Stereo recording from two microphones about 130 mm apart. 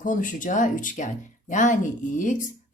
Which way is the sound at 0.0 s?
90° left.